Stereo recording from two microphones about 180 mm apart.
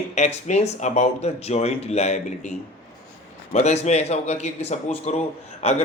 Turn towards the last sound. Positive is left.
turn(degrees=35)  # may be behind; listen again after turning